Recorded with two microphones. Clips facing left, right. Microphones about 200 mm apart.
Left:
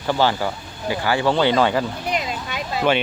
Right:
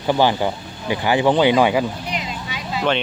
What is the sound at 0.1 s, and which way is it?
Speech, 15° right (ahead or behind).